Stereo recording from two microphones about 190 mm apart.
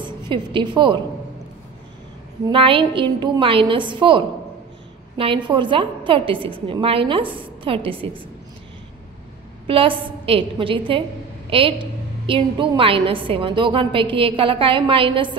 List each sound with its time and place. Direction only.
0.0 s a woman's voice: 25° right (ahead or behind)
2.4 s a woman's voice: 30° right (ahead or behind)
9.7 s a woman's voice: 30° right (ahead or behind)